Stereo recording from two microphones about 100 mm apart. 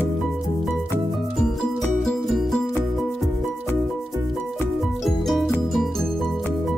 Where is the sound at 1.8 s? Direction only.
5° left (ahead or behind).